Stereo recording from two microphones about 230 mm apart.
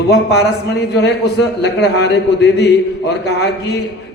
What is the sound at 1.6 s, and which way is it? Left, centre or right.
A man's voice, left.